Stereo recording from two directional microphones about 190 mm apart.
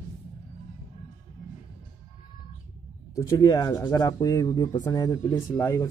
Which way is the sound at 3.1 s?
20° left (ahead or behind).